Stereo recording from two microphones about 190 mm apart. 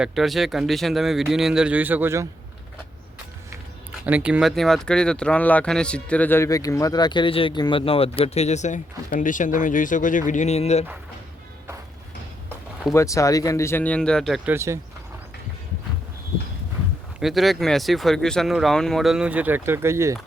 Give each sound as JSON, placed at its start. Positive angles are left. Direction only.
{"t": 0.0, "sound": "speech", "side_deg": 0}
{"t": 4.0, "sound": "speech", "side_deg": -5}
{"t": 12.9, "sound": "speech", "side_deg": 15}
{"t": 14.5, "sound": "speech", "side_deg": -15}
{"t": 17.2, "sound": "speech", "side_deg": 0}